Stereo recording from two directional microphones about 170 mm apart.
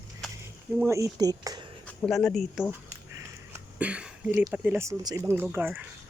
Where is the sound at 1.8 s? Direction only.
5° left (ahead or behind).